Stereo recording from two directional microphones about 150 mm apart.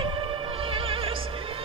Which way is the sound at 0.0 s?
35° right (ahead or behind).